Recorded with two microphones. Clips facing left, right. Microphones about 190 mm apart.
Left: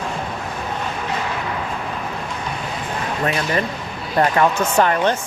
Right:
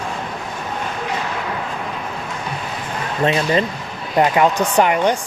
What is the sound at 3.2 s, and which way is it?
Speech, 20° right (ahead or behind).